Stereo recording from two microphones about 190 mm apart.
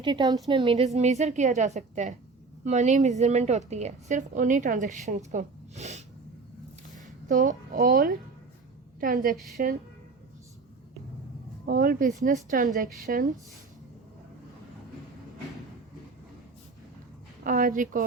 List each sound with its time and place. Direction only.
0.0 s a woman's voice: 20° right (ahead or behind); by 9.7 s 50° right (ahead or behind)
11.6 s a woman's voice: 45° right (ahead or behind)
17.4 s a woman's voice: 45° right (ahead or behind)